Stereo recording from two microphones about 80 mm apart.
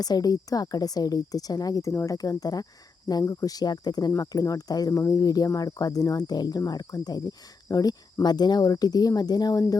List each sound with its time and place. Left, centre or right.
0.0 s a woman's voice: left
4.2 s a woman's voice: left